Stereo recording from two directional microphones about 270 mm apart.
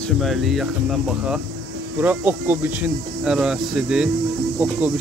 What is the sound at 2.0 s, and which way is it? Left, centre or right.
Speech, centre.